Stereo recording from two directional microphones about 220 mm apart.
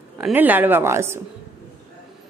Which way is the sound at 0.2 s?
5° right (ahead or behind).